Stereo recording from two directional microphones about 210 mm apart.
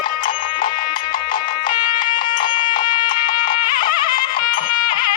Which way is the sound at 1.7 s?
20° left (ahead or behind).